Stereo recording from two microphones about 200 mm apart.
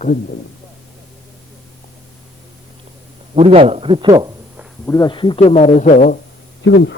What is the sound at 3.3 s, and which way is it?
A man's voice, 30° right (ahead or behind).